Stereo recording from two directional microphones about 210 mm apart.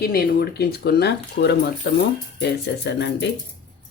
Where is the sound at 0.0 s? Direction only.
45° left (ahead or behind).